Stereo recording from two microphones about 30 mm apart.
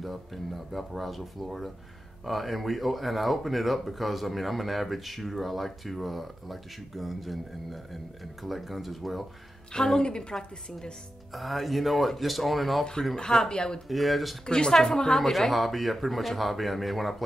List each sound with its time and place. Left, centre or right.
0.0 s speech: centre
9.7 s a woman's voice: left
10.3 s a woman's voice: centre
11.3 s speech: centre
13.1 s speech: left
13.8 s speech: centre
14.4 s speech: left
15.1 s speech: centre